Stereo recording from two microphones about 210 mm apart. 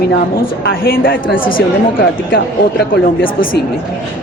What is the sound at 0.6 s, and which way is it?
Speech, 45° left (ahead or behind).